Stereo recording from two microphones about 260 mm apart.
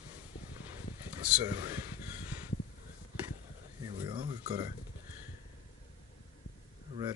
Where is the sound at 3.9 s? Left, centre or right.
Centre.